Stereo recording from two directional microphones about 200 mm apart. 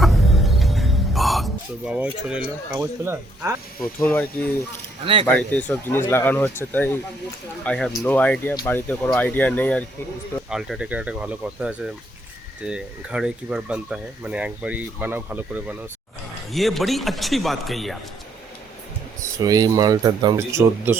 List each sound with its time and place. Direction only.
0.0 s chicken: centre (ahead or behind)
1.9 s a man's voice: 5° right (ahead or behind)
3.8 s speech: 5° left (ahead or behind)
10.5 s a man's voice: 5° right (ahead or behind)
19.4 s speech: 20° right (ahead or behind)